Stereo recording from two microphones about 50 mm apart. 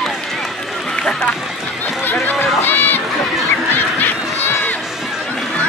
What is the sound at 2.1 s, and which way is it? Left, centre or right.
Run, left.